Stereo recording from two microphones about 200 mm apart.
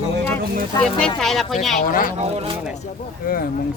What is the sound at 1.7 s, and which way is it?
Speech, 45° left (ahead or behind).